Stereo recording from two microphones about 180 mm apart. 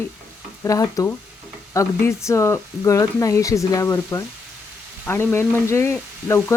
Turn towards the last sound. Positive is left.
turn(degrees=15)  # may be behind; listen again after turning